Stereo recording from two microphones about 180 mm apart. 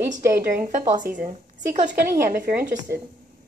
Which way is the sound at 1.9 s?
60° right (ahead or behind).